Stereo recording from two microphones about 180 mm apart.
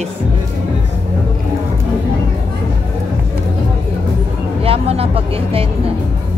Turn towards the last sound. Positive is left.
turn(degrees=-30)  # may be behind; listen again after turning